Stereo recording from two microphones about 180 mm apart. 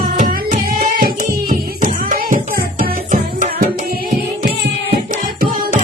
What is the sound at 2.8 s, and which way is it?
Music, 45° right (ahead or behind).